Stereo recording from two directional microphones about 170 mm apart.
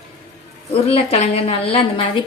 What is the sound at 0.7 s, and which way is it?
A woman's voice, 35° left (ahead or behind).